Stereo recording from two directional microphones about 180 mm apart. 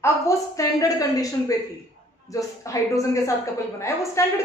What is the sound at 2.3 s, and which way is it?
Speech, 20° left (ahead or behind).